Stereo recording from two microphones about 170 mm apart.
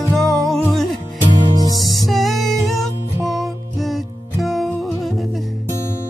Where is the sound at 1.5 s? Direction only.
25° right (ahead or behind).